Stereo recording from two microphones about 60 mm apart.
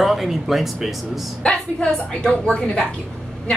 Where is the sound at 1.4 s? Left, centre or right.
Centre.